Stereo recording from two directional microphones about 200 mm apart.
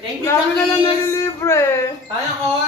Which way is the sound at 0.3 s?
15° left (ahead or behind).